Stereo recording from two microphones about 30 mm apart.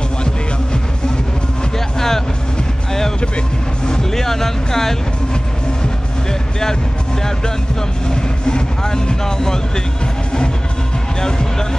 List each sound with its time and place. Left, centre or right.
2.0 s vehicle: centre
3.2 s vehicle: left
4.0 s music: centre
8.1 s speech: left
11.1 s speech: left